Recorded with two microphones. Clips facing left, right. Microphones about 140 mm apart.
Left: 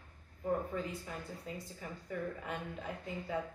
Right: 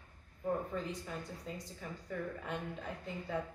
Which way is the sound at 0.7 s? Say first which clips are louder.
Even; 5° left (ahead or behind).